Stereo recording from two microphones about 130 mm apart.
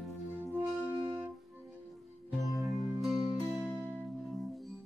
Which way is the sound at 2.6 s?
Centre (ahead or behind).